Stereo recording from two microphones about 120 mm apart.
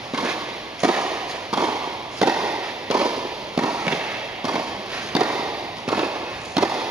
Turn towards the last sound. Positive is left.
turn(degrees=-5)  # may be behind; listen again after turning